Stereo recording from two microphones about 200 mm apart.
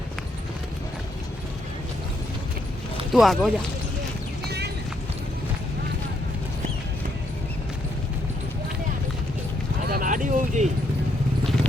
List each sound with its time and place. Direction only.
3.1 s speech: centre (ahead or behind)
4.4 s clip-clop: 55° right (ahead or behind)
9.9 s a sound: 40° right (ahead or behind)